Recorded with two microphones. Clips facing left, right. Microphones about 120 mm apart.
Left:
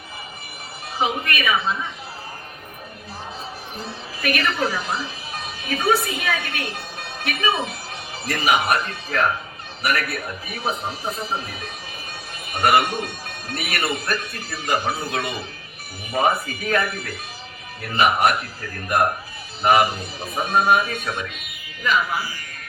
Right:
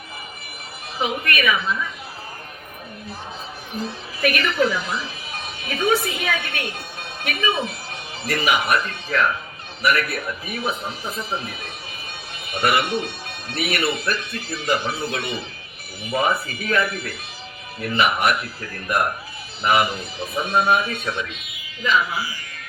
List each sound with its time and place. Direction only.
0.9 s speech: 30° left (ahead or behind)
4.2 s a woman's voice: 35° left (ahead or behind)
19.6 s speech: 40° left (ahead or behind)